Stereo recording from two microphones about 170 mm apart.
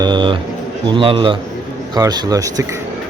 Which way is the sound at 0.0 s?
25° right (ahead or behind).